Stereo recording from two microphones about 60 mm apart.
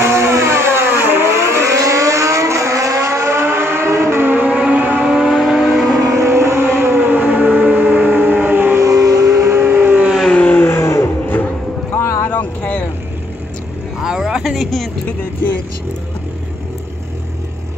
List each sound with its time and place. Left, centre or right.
0.0 s vehicle: right
1.3 s vehicle: right
4.5 s vehicle: right
5.0 s vehicle: centre
6.0 s music: right
8.8 s vehicle: right
9.5 s vehicle: right
10.3 s vehicle: left
10.6 s vehicle: left
12.3 s a sound: left
14.0 s a sound: centre